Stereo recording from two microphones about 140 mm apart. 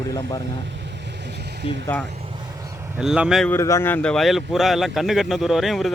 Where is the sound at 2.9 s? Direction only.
5° right (ahead or behind).